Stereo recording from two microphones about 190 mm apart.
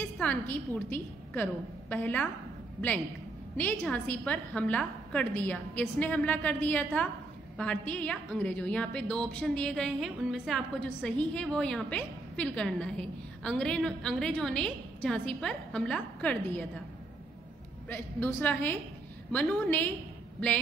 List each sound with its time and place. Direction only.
0.0 s a woman's voice: 10° left (ahead or behind)
3.5 s a woman's voice: 10° left (ahead or behind)
17.8 s a woman's voice: 10° left (ahead or behind)